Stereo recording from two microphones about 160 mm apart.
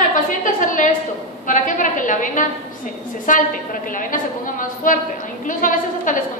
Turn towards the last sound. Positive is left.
turn(degrees=55)  # may be behind; listen again after turning